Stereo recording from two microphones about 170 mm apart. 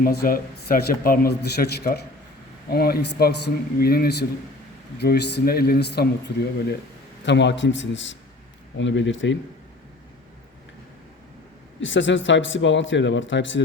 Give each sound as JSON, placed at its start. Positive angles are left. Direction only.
{"t": 0.0, "sound": "a man's voice", "side_deg": 60}
{"t": 4.9, "sound": "a man's voice", "side_deg": 75}
{"t": 7.3, "sound": "a man's voice", "side_deg": 90}
{"t": 11.8, "sound": "a man's voice", "side_deg": 90}